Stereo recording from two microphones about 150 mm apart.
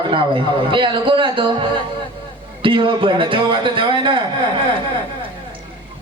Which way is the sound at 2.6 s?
35° right (ahead or behind).